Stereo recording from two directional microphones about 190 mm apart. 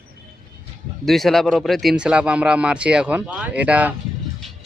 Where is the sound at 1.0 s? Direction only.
Centre (ahead or behind).